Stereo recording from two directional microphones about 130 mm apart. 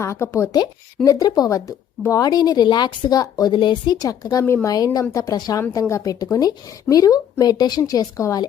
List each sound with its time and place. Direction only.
0.0 s speech: 20° left (ahead or behind)
4.4 s a woman's voice: 20° left (ahead or behind)